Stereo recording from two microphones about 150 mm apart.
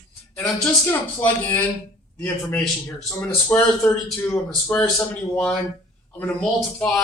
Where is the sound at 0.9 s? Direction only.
15° left (ahead or behind).